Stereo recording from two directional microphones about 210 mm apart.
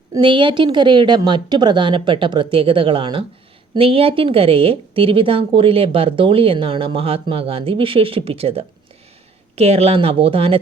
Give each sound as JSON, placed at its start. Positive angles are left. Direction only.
{"t": 0.1, "sound": "speech", "side_deg": -25}